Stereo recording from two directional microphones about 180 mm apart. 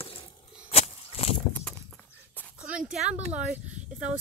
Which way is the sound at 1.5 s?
5° left (ahead or behind).